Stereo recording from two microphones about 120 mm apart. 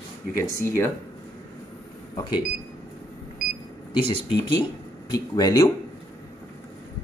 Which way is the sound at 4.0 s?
45° left (ahead or behind).